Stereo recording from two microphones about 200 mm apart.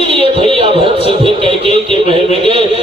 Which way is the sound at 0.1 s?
25° right (ahead or behind).